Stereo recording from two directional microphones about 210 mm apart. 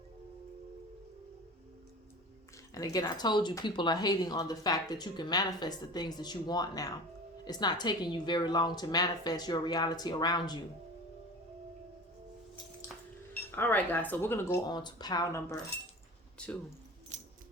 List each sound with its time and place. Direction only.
2.7 s speech: 15° left (ahead or behind)
13.3 s speech: 10° left (ahead or behind)
17.1 s a sound: 35° right (ahead or behind)